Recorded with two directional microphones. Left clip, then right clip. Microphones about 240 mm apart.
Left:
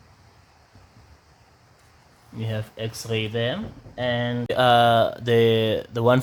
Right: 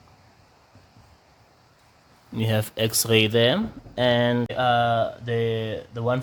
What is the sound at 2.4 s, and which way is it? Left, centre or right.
Speech, right.